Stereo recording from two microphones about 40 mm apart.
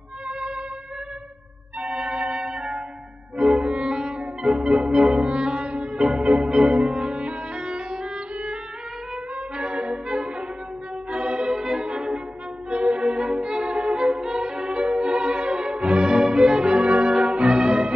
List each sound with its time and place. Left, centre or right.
0.3 s music: right
1.8 s music: right
9.1 s trumpet: right
10.1 s music: right